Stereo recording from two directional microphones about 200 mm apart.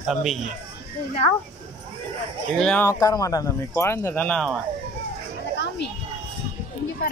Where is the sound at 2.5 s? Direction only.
5° left (ahead or behind).